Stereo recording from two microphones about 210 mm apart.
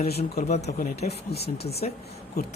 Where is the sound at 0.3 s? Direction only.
30° left (ahead or behind).